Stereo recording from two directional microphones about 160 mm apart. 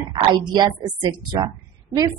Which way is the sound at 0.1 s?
25° right (ahead or behind).